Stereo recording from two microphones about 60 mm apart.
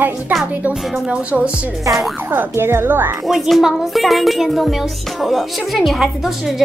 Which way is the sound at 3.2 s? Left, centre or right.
Centre.